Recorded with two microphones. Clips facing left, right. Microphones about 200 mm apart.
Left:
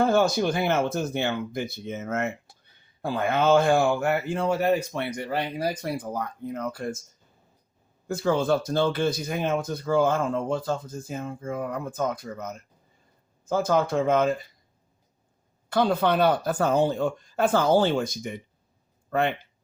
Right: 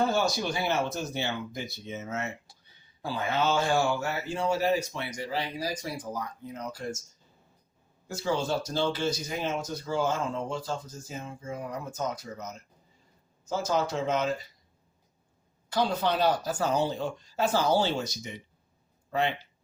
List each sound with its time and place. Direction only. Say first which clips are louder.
0.1 s speech: left 6 dB; 55° left (ahead or behind)
8.0 s speech: left 6 dB; 55° left (ahead or behind)
15.7 s speech: left 5 dB; 55° left (ahead or behind)